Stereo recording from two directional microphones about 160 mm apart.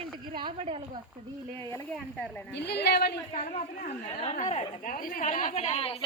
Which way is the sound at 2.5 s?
90° left.